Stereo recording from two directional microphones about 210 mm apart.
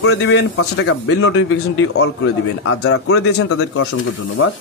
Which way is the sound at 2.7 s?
90° left.